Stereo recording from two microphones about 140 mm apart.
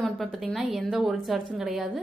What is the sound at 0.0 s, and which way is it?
A woman's voice, centre (ahead or behind).